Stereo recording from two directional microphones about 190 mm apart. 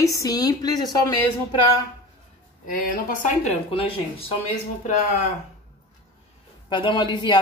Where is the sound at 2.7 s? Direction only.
45° left (ahead or behind); by 4.3 s 30° left (ahead or behind).